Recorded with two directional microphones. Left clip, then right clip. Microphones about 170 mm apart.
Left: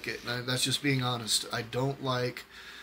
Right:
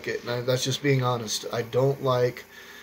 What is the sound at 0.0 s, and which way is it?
Speech, 15° left (ahead or behind).